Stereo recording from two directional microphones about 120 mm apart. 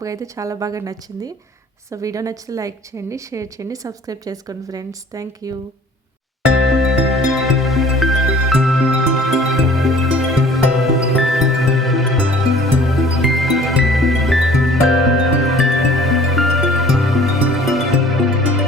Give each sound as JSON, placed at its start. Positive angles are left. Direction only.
{"t": 0.0, "sound": "a woman's voice", "side_deg": -25}
{"t": 6.7, "sound": "music", "side_deg": 0}